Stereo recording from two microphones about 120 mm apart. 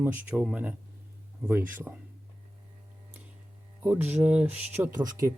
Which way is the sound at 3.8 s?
15° right (ahead or behind).